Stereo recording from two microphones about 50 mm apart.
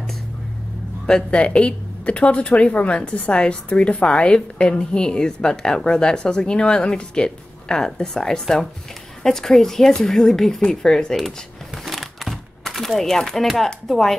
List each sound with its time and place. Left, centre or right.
1.0 s speech: centre
11.1 s a sound: centre
13.6 s speech: centre